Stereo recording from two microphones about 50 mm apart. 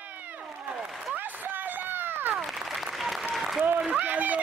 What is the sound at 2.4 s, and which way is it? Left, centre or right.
Applause, centre.